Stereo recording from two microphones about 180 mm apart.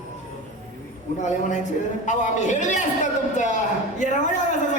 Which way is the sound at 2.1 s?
45° left (ahead or behind).